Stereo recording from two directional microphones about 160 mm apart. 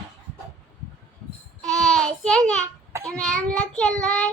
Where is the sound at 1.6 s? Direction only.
5° left (ahead or behind).